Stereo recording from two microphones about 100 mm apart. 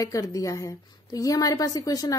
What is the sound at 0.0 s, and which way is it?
Speech, 35° left (ahead or behind).